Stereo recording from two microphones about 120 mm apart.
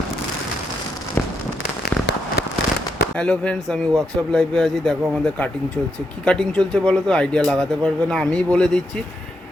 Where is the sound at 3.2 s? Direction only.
5° left (ahead or behind).